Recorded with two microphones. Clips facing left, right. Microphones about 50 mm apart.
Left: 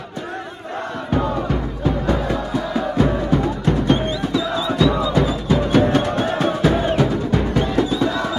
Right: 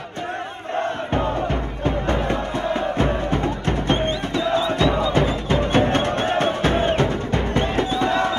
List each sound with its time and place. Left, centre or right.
0.7 s music: right